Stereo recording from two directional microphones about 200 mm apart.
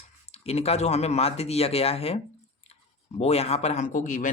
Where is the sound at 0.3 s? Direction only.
30° left (ahead or behind).